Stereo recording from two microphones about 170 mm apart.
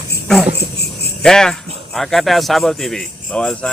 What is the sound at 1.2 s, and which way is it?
Speech, 5° left (ahead or behind).